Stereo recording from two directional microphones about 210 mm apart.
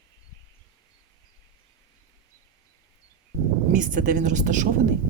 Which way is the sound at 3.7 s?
40° right (ahead or behind).